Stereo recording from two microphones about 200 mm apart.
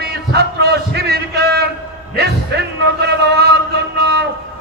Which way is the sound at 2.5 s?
55° right (ahead or behind).